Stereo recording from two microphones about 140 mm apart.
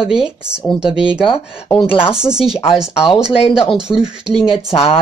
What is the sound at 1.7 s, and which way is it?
Speech, 5° right (ahead or behind).